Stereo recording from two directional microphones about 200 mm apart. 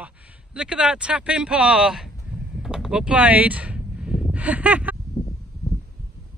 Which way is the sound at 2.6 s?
5° right (ahead or behind).